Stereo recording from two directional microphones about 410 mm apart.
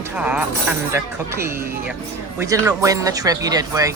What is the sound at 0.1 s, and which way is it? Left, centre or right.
Speech, centre.